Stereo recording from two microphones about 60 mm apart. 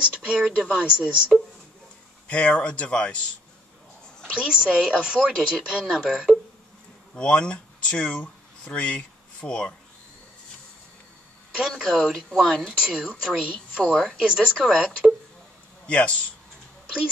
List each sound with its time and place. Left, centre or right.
0.0 s speech: centre
2.2 s speech: left
4.3 s speech: centre
7.2 s speech: centre
11.5 s speech: centre
12.1 s speech: centre
12.4 s speech: centre
14.6 s speech: centre
15.9 s speech: left